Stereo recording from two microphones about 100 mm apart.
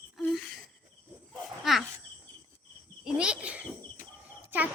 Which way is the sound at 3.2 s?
10° right (ahead or behind).